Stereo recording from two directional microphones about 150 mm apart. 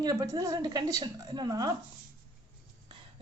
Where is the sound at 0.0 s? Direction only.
25° right (ahead or behind).